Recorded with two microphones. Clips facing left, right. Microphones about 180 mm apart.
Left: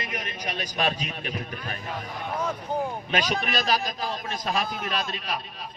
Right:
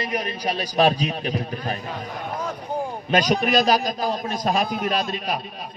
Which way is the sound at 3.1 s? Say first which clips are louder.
Right 9 dB; 40° right (ahead or behind).